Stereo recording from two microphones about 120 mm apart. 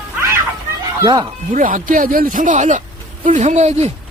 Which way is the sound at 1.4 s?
90° right.